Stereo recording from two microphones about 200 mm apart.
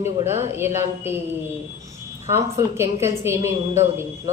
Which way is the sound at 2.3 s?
15° right (ahead or behind).